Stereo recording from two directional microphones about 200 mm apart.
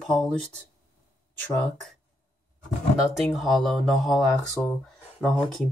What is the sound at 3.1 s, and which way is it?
Speech, centre (ahead or behind).